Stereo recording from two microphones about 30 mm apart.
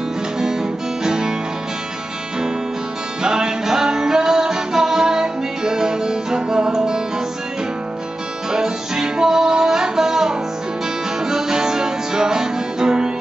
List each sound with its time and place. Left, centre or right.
0.4 s music: centre
3.2 s music: right
8.5 s music: right